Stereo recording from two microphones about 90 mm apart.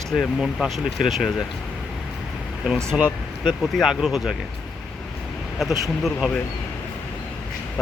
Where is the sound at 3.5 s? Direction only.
Centre (ahead or behind).